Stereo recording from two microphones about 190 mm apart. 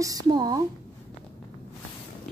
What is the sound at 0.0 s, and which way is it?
Speech, 20° right (ahead or behind).